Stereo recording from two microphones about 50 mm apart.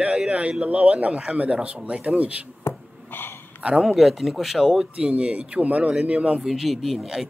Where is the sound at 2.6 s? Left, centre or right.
Left.